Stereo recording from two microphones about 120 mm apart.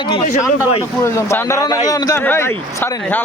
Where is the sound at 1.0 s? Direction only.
20° left (ahead or behind).